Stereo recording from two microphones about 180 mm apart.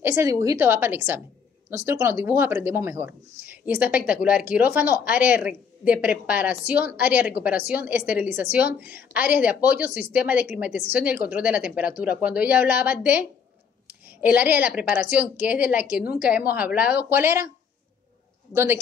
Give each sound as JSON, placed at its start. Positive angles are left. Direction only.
{"t": 0.0, "sound": "speech", "side_deg": -15}
{"t": 18.5, "sound": "speech", "side_deg": -15}